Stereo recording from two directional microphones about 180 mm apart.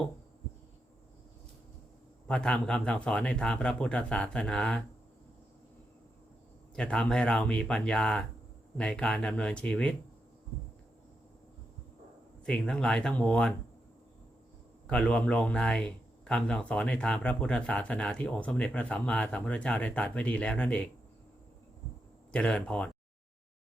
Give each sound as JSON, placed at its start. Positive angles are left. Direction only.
{"t": 2.2, "sound": "speech", "side_deg": 5}
{"t": 6.7, "sound": "speech", "side_deg": 5}
{"t": 12.5, "sound": "speech", "side_deg": 5}
{"t": 14.8, "sound": "speech", "side_deg": 5}
{"t": 22.3, "sound": "speech", "side_deg": 5}